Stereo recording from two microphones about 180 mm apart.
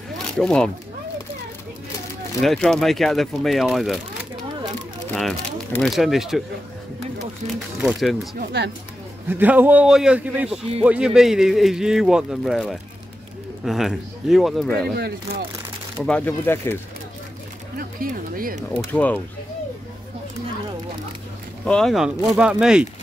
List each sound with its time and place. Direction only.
0.4 s speech: 5° left (ahead or behind)
2.4 s speech: centre (ahead or behind)
5.1 s speech: 5° left (ahead or behind)
7.8 s speech: centre (ahead or behind)
8.4 s speech: 70° right (ahead or behind)
9.3 s a man's voice: 10° right (ahead or behind)
16.0 s speech: 5° left (ahead or behind)
17.7 s speech: 55° right (ahead or behind)
18.9 s speech: 10° left (ahead or behind)
21.6 s speech: 5° left (ahead or behind)